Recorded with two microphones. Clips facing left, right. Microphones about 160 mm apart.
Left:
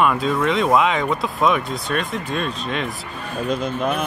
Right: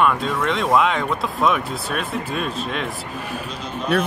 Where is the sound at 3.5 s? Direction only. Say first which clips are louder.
Left 7 dB; 50° left (ahead or behind).